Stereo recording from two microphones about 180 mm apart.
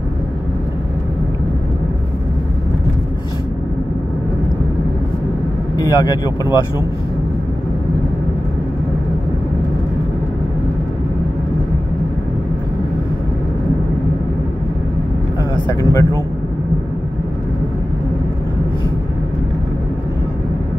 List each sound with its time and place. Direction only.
5.8 s speech: 20° left (ahead or behind)
15.5 s speech: 15° left (ahead or behind)